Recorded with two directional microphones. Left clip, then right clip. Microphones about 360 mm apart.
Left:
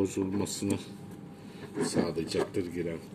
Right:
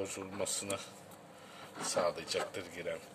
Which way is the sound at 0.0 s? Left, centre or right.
Centre.